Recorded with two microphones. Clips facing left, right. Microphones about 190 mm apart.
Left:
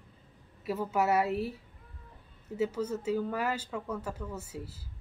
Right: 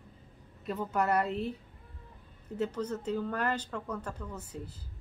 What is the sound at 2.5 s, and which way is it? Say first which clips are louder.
A woman's voice: left 2 dB; 5° left (ahead or behind).